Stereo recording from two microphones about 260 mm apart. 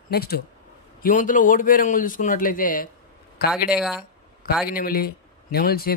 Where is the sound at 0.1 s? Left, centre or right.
Left.